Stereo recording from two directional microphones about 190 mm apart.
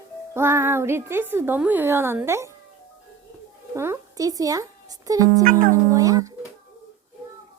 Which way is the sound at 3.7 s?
15° right (ahead or behind).